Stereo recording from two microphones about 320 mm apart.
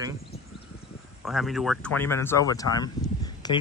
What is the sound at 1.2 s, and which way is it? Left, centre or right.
Speech, centre.